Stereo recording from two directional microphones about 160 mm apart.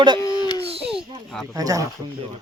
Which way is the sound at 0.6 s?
40° right (ahead or behind).